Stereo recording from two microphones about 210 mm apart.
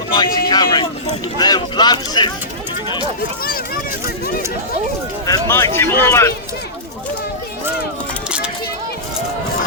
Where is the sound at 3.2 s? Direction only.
45° left (ahead or behind).